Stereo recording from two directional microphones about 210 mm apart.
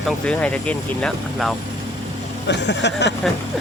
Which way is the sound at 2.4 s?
55° left (ahead or behind).